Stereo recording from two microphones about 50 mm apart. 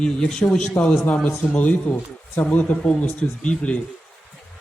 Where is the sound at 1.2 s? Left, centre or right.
Left.